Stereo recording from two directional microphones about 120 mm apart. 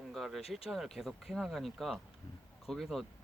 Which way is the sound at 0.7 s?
Centre (ahead or behind).